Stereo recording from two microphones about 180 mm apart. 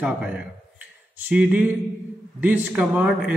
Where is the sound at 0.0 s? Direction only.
5° right (ahead or behind).